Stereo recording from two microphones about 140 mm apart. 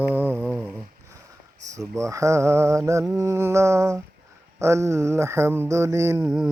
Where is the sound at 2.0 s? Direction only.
20° right (ahead or behind).